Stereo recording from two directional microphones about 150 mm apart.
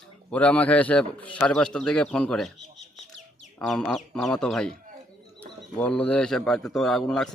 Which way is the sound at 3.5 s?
5° left (ahead or behind).